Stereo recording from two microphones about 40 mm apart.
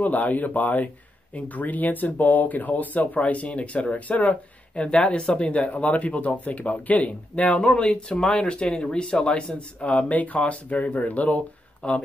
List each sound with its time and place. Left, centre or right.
0.0 s speech: left